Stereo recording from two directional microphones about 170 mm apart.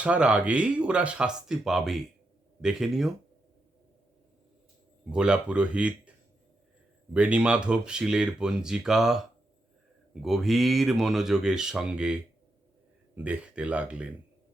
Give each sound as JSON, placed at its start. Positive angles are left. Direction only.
{"t": 0.0, "sound": "speech", "side_deg": -5}
{"t": 5.0, "sound": "speech", "side_deg": -5}
{"t": 7.1, "sound": "speech", "side_deg": -5}